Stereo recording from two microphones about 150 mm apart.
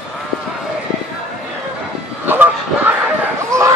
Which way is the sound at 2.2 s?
10° right (ahead or behind).